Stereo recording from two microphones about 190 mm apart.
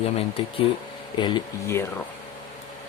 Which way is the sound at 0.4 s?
30° left (ahead or behind).